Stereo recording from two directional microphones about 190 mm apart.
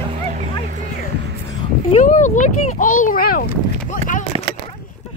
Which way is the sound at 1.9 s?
35° left (ahead or behind).